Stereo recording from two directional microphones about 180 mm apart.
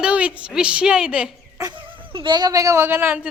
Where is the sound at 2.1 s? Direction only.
25° right (ahead or behind); by 3.3 s 10° right (ahead or behind).